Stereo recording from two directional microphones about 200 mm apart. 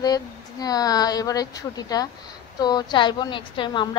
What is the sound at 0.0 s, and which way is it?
A woman's voice, 20° left (ahead or behind).